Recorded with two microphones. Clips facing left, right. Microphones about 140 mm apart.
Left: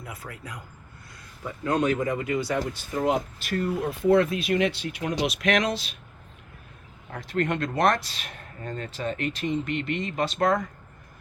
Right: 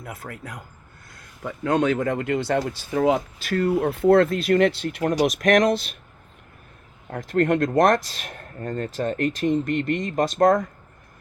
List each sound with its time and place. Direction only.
0.0 s speech: 55° right (ahead or behind); by 3.2 s 85° right
3.6 s speech: 60° right (ahead or behind)
7.1 s speech: 50° right (ahead or behind)